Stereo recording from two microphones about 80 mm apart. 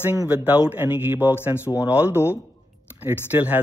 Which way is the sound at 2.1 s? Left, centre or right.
Left.